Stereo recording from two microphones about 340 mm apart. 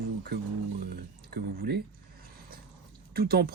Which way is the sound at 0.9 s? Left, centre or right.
Right.